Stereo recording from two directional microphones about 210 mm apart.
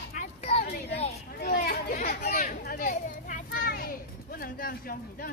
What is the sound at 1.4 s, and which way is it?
Chatter, 45° left (ahead or behind).